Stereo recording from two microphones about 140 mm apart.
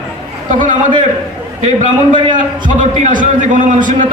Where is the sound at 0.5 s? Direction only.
65° right (ahead or behind).